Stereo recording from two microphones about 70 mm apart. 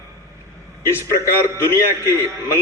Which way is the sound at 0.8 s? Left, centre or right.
Left.